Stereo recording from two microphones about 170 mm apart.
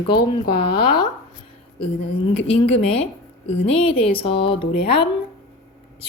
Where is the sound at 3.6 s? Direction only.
35° left (ahead or behind).